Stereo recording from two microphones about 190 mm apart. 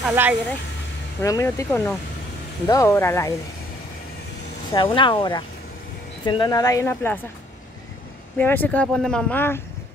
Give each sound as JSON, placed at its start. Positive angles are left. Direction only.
{"t": 0.0, "sound": "speech", "side_deg": -10}
{"t": 1.2, "sound": "speech", "side_deg": 15}
{"t": 4.7, "sound": "speech", "side_deg": 25}
{"t": 8.4, "sound": "speech", "side_deg": 10}